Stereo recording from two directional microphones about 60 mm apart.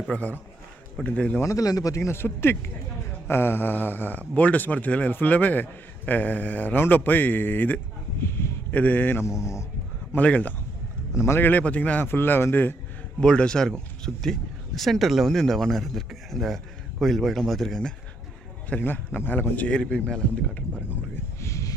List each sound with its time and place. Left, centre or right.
0.1 s speech: left
1.5 s speech: left
2.1 s speech: left
8.2 s a sound: left
8.7 s speech: left
11.1 s a man's voice: left
11.3 s speech: left
12.0 s speech: left
13.1 s speech: centre
18.8 s speech: left
19.9 s speech: centre
21.4 s a sound: left